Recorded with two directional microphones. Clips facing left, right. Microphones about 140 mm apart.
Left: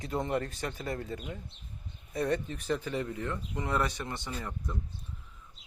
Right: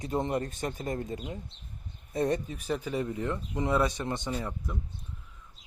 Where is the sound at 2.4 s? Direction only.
10° right (ahead or behind).